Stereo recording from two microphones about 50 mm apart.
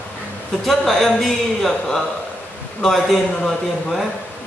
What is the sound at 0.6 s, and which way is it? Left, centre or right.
Speech, centre.